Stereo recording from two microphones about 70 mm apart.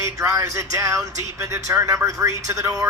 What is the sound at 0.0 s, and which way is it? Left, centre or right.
Speech, right.